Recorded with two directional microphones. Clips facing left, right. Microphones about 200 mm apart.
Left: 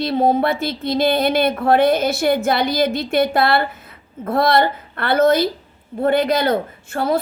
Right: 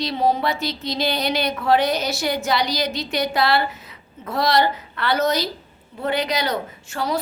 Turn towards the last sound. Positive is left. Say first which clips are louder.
# left 5 dB
turn(degrees=55)  # may be behind; listen again after turning